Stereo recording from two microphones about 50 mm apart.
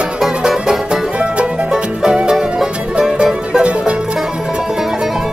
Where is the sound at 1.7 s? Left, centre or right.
Centre.